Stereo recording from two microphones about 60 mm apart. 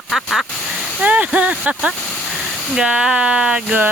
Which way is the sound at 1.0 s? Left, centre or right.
Right.